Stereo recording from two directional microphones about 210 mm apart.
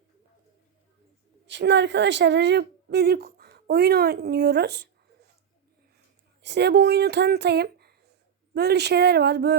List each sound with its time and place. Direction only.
1.5 s a woman's voice: 55° right (ahead or behind)
6.4 s a woman's voice: 55° right (ahead or behind)